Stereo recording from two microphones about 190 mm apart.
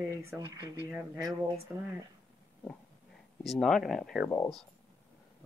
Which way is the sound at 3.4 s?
Centre (ahead or behind).